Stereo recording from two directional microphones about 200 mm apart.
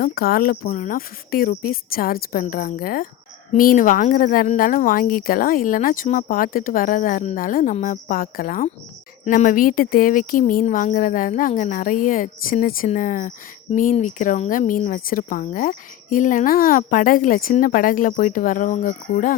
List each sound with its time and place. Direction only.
0.0 s speech: 50° left (ahead or behind)